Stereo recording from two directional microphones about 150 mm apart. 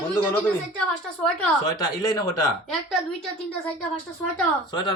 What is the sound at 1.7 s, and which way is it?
Speech, 25° left (ahead or behind).